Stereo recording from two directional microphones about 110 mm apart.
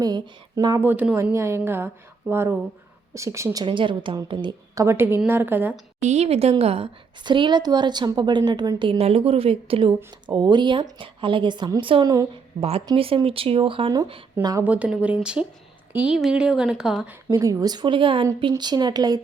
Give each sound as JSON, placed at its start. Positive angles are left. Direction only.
{"t": 0.0, "sound": "speech", "side_deg": -35}
{"t": 0.8, "sound": "a woman's voice", "side_deg": -15}
{"t": 3.2, "sound": "a woman's voice", "side_deg": -25}
{"t": 3.6, "sound": "a woman's voice", "side_deg": -50}
{"t": 4.7, "sound": "a woman's voice", "side_deg": -25}
{"t": 6.0, "sound": "a woman's voice", "side_deg": -85}
{"t": 7.3, "sound": "a woman's voice", "side_deg": -45}
{"t": 10.2, "sound": "a woman's voice", "side_deg": -40}
{"t": 12.5, "sound": "speech", "side_deg": -60}
{"t": 14.6, "sound": "speech", "side_deg": -10}
{"t": 17.4, "sound": "a woman's voice", "side_deg": -35}